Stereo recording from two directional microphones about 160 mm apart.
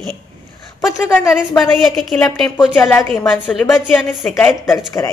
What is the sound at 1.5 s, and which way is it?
Speech, centre (ahead or behind).